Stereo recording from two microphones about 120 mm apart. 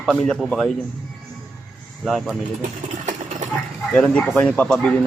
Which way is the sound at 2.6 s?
90° right.